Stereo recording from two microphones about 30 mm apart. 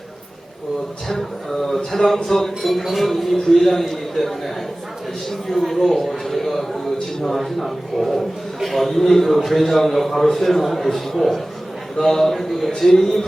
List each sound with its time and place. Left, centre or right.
1.5 s a man's voice: centre
12.7 s a man's voice: centre